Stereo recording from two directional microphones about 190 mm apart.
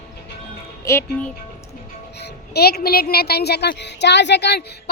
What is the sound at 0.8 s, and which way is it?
Speech, 15° left (ahead or behind).